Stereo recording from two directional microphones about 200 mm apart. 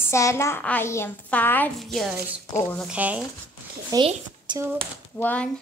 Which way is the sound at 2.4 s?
15° left (ahead or behind).